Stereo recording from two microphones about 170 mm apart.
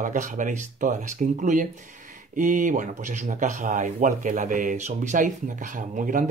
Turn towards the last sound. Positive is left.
turn(degrees=-50)  # may be behind; listen again after turning